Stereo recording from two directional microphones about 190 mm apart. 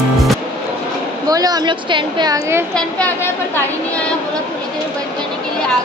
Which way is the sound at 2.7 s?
10° left (ahead or behind).